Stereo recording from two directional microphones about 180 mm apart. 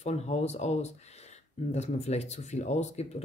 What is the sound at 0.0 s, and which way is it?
Speech, 40° left (ahead or behind).